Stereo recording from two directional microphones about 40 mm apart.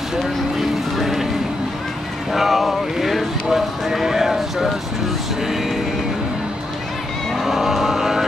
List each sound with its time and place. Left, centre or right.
0.2 s vehicle: centre
2.3 s horse: centre
7.3 s vehicle: centre